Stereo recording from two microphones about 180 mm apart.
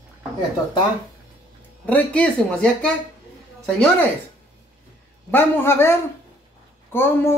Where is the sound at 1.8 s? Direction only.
10° left (ahead or behind).